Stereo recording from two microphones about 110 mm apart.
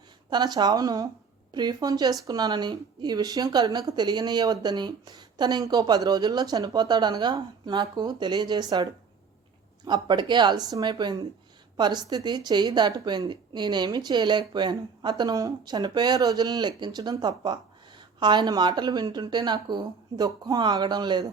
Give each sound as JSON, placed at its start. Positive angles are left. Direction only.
{"t": 0.3, "sound": "speech", "side_deg": -40}